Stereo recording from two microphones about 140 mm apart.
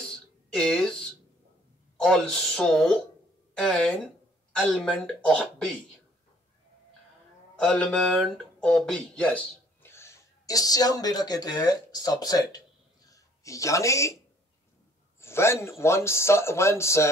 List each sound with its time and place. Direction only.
0.1 s a sound: 5° left (ahead or behind)
2.0 s speech: 5° left (ahead or behind)
7.5 s speech: 5° left (ahead or behind)
9.8 s speech: 20° left (ahead or behind)
15.1 s a man's voice: 20° left (ahead or behind)